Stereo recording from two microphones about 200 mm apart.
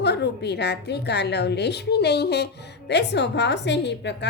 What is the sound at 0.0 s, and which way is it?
A woman's voice, 55° left (ahead or behind).